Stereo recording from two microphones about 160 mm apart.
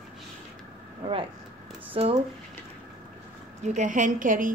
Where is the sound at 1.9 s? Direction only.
35° right (ahead or behind).